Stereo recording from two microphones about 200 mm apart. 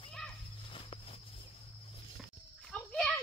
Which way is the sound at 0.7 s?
25° left (ahead or behind).